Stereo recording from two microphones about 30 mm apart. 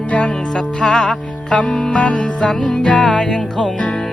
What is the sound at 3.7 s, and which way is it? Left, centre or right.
Music, left.